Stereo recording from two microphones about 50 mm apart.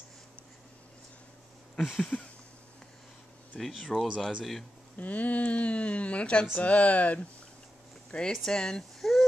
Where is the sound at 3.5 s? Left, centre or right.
Left.